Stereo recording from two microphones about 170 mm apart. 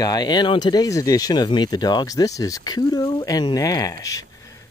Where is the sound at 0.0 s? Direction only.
25° left (ahead or behind).